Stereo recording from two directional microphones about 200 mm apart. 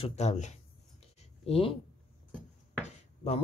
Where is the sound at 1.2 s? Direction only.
30° left (ahead or behind).